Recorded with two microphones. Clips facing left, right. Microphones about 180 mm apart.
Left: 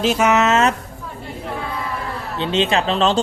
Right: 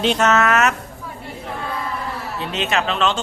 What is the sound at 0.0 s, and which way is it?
Speech, 5° left (ahead or behind).